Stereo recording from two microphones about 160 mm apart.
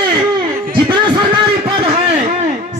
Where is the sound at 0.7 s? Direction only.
30° right (ahead or behind).